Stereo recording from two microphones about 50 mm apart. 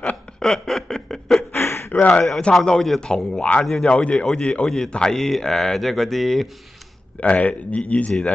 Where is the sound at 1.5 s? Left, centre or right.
Left.